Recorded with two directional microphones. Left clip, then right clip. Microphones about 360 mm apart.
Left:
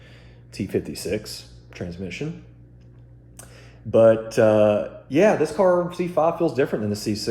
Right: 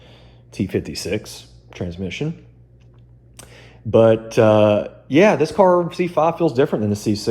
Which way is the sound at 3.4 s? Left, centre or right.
Centre.